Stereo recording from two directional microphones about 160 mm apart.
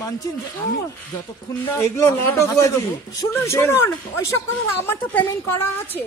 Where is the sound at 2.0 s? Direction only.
20° left (ahead or behind).